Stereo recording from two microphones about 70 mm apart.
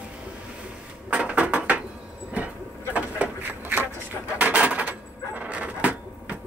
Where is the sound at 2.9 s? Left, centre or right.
Right.